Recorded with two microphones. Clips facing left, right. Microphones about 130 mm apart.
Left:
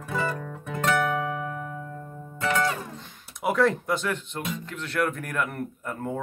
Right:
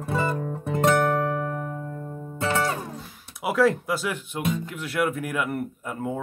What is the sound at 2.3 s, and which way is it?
Music, 30° right (ahead or behind).